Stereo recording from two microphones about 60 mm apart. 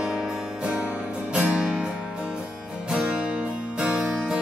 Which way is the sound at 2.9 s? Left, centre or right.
Centre.